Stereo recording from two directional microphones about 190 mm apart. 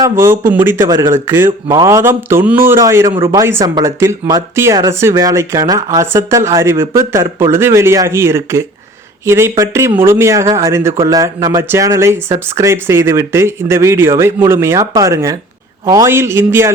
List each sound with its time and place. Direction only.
0.0 s speech: 15° right (ahead or behind)